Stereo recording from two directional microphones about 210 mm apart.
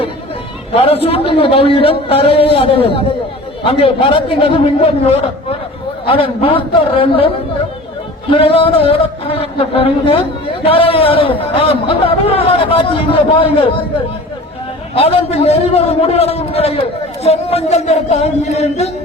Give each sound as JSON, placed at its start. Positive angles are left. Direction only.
{"t": 0.7, "sound": "a man's voice", "side_deg": 30}
{"t": 8.3, "sound": "a man's voice", "side_deg": 25}
{"t": 14.9, "sound": "a man's voice", "side_deg": 30}